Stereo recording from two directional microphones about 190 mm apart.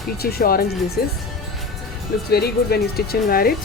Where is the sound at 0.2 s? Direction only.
55° left (ahead or behind).